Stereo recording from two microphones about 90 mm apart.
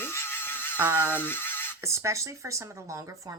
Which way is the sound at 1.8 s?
35° right (ahead or behind).